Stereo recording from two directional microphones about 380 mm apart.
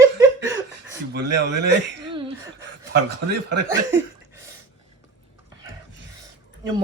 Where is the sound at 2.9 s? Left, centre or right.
Right.